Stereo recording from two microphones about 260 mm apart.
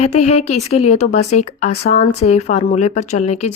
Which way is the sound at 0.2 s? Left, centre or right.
Left.